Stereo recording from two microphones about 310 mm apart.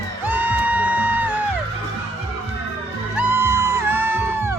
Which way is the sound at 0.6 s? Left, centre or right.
Centre.